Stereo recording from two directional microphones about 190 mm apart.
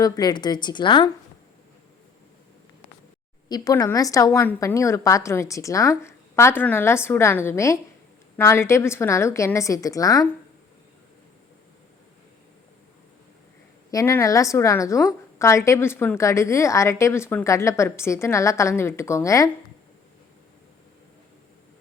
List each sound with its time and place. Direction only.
0.0 s a woman's voice: 20° left (ahead or behind)
3.5 s a woman's voice: 20° left (ahead or behind)
13.9 s a woman's voice: 15° left (ahead or behind)